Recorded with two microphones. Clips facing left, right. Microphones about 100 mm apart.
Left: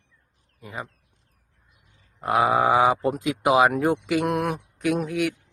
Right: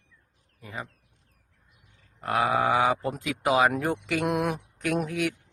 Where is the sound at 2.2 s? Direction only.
20° left (ahead or behind).